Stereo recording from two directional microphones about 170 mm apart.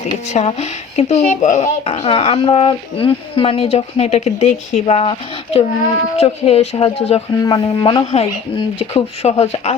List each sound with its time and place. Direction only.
0.3 s speech: 40° left (ahead or behind)
6.1 s speech: 35° left (ahead or behind)
7.4 s speech: 25° left (ahead or behind)